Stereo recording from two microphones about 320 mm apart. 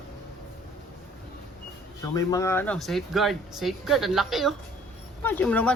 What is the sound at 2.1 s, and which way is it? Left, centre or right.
Speech, centre.